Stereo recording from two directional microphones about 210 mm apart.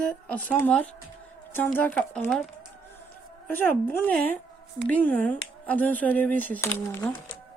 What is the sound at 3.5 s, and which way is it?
A woman's voice, 10° left (ahead or behind).